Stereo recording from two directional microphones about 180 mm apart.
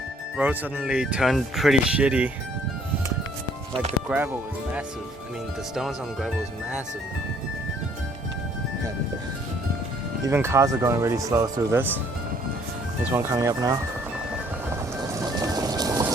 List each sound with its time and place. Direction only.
0.3 s speech: 5° right (ahead or behind)
4.1 s speech: 5° right (ahead or behind)
5.7 s speech: centre (ahead or behind)
10.2 s speech: 15° right (ahead or behind)
13.1 s speech: 15° right (ahead or behind)
14.7 s music: 20° right (ahead or behind)